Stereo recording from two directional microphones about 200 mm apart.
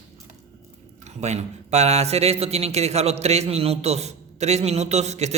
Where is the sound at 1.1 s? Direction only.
35° right (ahead or behind).